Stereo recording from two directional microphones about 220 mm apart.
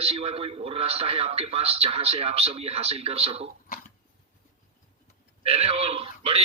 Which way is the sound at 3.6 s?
40° left (ahead or behind).